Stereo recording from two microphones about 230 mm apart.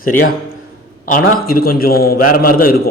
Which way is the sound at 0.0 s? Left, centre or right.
Left.